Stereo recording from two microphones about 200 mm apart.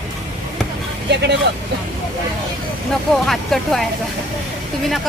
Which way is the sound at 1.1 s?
60° right (ahead or behind).